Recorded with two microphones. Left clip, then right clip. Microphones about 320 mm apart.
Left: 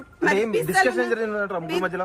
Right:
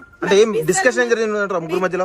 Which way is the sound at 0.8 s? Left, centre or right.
Right.